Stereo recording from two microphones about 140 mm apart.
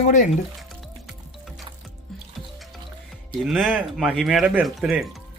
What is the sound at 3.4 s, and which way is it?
Speech, centre (ahead or behind).